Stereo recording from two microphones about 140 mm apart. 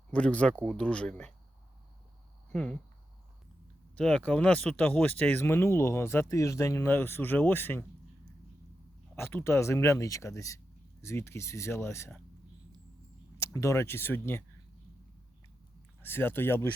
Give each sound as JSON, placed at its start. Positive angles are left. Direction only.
{"t": 0.1, "sound": "speech", "side_deg": 10}
{"t": 2.5, "sound": "speech", "side_deg": 5}
{"t": 3.9, "sound": "speech", "side_deg": 5}
{"t": 9.1, "sound": "speech", "side_deg": 15}
{"t": 13.4, "sound": "speech", "side_deg": 20}
{"t": 16.0, "sound": "speech", "side_deg": 15}